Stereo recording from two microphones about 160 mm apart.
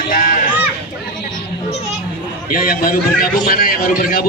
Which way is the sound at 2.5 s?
65° left (ahead or behind).